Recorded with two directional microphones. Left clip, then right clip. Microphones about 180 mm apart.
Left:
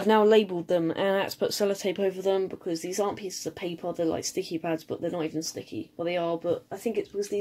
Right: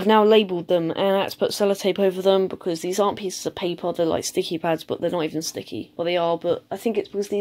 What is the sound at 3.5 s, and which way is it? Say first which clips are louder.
Speech: right 8 dB; 50° right (ahead or behind).